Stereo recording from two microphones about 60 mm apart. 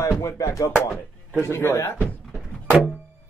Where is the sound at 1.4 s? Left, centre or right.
Left.